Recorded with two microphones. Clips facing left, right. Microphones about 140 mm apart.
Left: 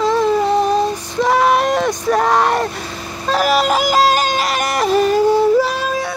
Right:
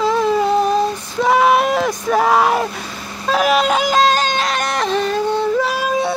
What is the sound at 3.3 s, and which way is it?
Music, centre (ahead or behind).